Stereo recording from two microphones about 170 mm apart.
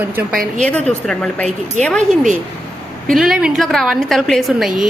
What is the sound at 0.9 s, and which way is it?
Speech, 5° left (ahead or behind).